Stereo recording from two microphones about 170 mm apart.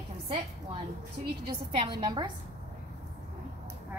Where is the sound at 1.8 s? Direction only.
30° right (ahead or behind).